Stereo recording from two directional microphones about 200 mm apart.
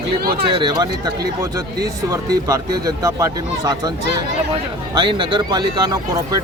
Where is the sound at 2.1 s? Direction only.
15° right (ahead or behind).